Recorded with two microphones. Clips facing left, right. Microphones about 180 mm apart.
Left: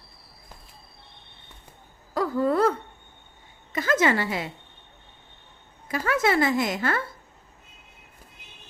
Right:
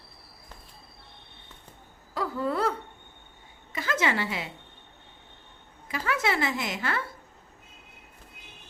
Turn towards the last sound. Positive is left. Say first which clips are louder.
# left 6 dB
turn(degrees=45)  # may be behind; listen again after turning